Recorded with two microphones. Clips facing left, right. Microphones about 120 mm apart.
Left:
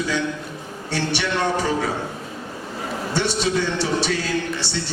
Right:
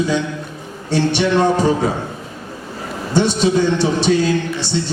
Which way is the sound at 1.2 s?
25° right (ahead or behind).